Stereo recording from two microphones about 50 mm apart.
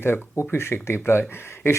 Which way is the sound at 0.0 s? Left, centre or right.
Left.